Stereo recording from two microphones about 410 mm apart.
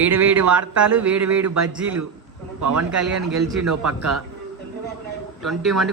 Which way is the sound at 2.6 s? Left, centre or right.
Right.